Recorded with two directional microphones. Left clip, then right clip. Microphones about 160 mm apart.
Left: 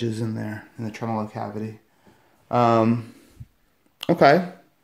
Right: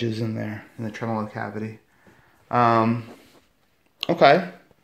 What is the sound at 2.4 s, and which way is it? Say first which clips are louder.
Speech: even; 25° left (ahead or behind).